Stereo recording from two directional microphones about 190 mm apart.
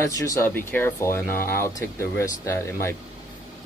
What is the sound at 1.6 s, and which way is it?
Speech, 15° left (ahead or behind).